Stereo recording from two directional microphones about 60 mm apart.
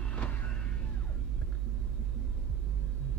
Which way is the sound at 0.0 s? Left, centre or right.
Left.